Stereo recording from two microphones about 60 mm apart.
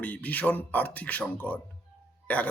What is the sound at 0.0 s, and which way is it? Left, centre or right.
Speech, left.